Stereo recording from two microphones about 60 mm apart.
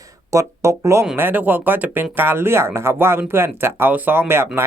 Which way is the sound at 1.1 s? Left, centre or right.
Right.